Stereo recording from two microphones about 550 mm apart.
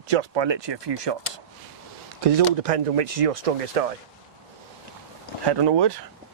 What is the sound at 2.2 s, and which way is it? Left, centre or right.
Speech, right.